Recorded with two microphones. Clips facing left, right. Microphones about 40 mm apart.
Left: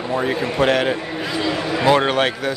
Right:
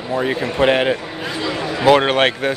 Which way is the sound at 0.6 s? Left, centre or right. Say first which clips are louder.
Right 2 dB; right.